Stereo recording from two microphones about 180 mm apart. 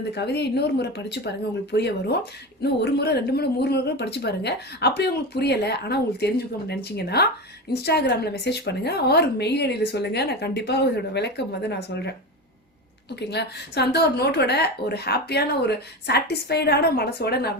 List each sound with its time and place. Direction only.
0.1 s a woman's voice: 65° left (ahead or behind)
13.1 s a woman's voice: 65° left (ahead or behind)